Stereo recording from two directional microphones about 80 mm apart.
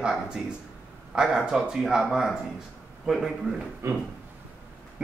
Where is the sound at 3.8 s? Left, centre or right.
Right.